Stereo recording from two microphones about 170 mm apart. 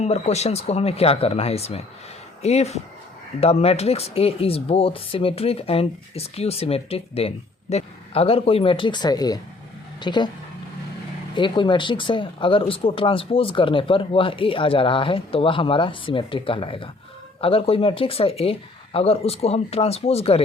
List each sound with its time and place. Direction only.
0.0 s speech: 40° left (ahead or behind)
11.3 s speech: 30° left (ahead or behind)